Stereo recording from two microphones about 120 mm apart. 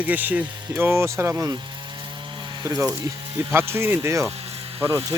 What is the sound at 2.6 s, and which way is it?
Speech, 25° right (ahead or behind).